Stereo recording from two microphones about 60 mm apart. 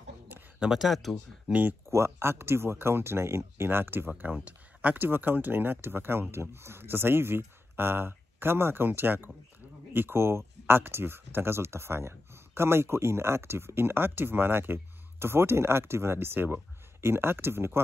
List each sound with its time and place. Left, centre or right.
0.7 s speech: centre
1.5 s speech: right
1.9 s speech: right
4.2 s speech: right